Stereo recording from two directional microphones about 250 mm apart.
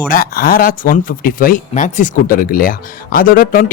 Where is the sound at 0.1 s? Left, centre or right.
Left.